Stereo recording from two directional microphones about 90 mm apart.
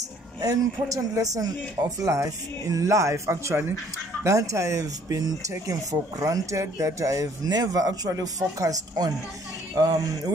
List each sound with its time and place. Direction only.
0.4 s speech: 40° right (ahead or behind)